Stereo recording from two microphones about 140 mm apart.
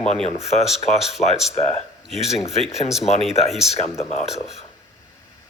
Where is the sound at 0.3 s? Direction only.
50° left (ahead or behind).